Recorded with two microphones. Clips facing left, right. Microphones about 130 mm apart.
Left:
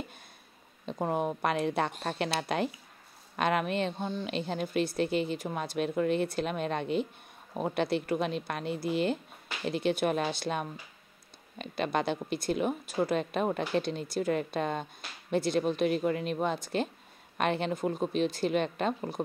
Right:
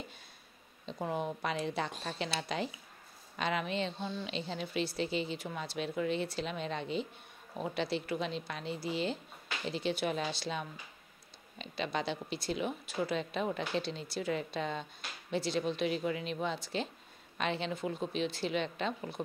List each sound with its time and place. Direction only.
0.8 s a woman's voice: 50° left (ahead or behind)